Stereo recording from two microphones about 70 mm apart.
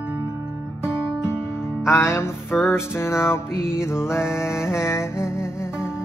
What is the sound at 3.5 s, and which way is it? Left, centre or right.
Music, centre.